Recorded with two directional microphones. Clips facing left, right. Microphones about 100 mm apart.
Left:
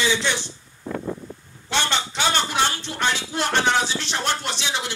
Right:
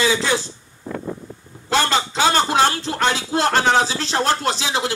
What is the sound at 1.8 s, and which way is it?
Music, 35° right (ahead or behind).